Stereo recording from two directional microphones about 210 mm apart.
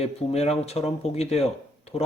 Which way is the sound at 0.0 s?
30° left (ahead or behind).